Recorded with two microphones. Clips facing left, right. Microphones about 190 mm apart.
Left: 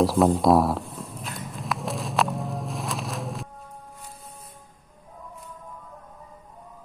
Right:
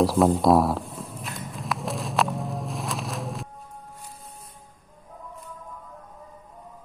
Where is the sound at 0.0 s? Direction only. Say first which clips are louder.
Even; centre (ahead or behind).